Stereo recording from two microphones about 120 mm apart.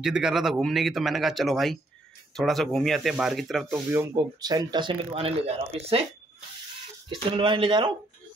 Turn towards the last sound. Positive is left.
turn(degrees=-40)  # may be behind; listen again after turning